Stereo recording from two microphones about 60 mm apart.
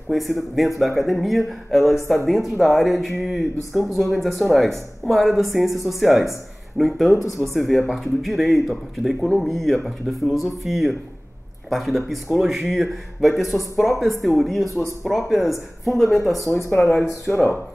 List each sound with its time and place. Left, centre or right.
0.1 s speech: centre
16.4 s speech: left